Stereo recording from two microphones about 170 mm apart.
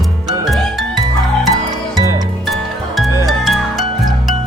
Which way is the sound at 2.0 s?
20° right (ahead or behind).